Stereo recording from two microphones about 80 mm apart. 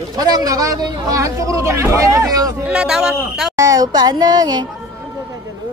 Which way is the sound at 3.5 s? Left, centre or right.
Right.